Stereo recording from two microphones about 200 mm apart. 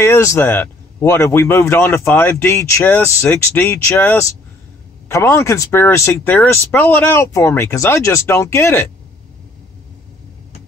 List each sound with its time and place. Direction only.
0.0 s a man's voice: 15° left (ahead or behind)